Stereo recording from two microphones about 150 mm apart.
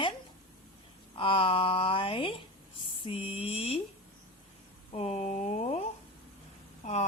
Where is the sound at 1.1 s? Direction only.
35° left (ahead or behind).